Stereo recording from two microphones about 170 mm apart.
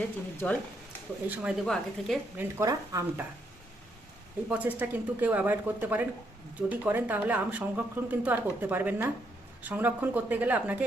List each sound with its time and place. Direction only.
0.4 s speech: 10° left (ahead or behind)
1.3 s a woman's voice: 10° right (ahead or behind)
1.6 s a woman's voice: 5° left (ahead or behind)
2.4 s a woman's voice: 20° right (ahead or behind)
4.4 s a woman's voice: 10° right (ahead or behind)